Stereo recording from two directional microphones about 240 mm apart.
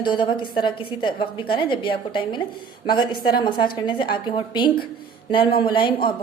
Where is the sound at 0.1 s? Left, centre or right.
Centre.